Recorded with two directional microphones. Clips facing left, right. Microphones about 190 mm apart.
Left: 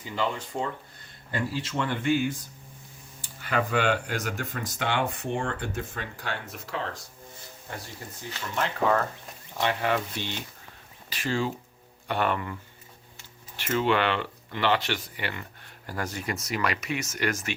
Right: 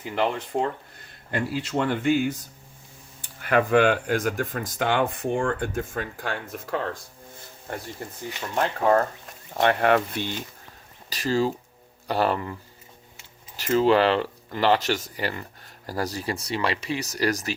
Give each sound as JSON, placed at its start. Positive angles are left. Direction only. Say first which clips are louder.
{"t": 0.0, "sound": "speech", "louder": "right 4 dB", "side_deg": -60}
{"t": 1.7, "sound": "speech", "louder": "right 4 dB", "side_deg": -50}
{"t": 3.4, "sound": "speech", "louder": "right 6 dB", "side_deg": -50}
{"t": 8.0, "sound": "speech", "louder": "right 6 dB", "side_deg": -50}
{"t": 8.5, "sound": "speech", "louder": "right 4 dB", "side_deg": -35}
{"t": 9.6, "sound": "speech", "louder": "right 6 dB", "side_deg": -60}
{"t": 11.1, "sound": "speech", "louder": "right 5 dB", "side_deg": -35}
{"t": 13.6, "sound": "speech", "louder": "right 6 dB", "side_deg": -35}